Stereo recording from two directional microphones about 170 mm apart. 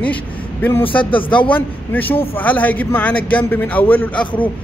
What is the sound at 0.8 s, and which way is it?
Speech, 30° left (ahead or behind).